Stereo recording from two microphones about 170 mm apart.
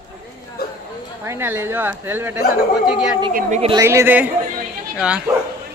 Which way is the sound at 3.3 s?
40° right (ahead or behind).